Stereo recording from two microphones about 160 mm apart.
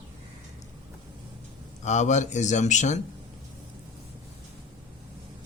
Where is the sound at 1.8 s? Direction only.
45° left (ahead or behind).